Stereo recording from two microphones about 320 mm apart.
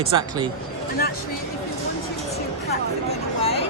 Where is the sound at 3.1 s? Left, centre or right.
Centre.